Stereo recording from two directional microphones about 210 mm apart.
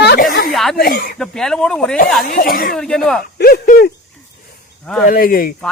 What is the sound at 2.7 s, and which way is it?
Speech, 5° left (ahead or behind).